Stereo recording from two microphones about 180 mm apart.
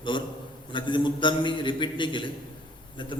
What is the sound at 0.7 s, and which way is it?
A man's voice, 25° left (ahead or behind).